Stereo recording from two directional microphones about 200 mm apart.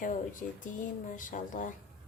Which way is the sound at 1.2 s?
40° left (ahead or behind).